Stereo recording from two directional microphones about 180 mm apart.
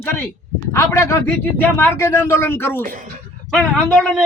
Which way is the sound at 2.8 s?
50° right (ahead or behind).